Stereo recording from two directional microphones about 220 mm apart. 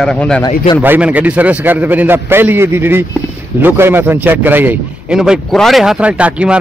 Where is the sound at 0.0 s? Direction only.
5° left (ahead or behind).